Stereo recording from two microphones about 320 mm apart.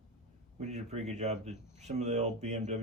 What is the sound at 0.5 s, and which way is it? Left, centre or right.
Speech, right.